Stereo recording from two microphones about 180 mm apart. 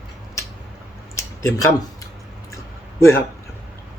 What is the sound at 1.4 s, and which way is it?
Speech, 20° left (ahead or behind).